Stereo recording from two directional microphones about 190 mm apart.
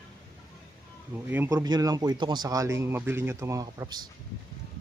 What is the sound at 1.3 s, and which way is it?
Speech, 15° right (ahead or behind).